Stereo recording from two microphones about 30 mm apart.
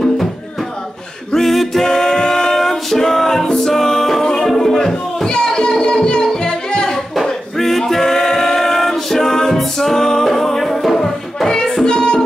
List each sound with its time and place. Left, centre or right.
1.3 s a capella: centre
1.9 s music: centre
5.3 s a sound: left
6.2 s music: left
7.2 s singing: centre
9.8 s music: centre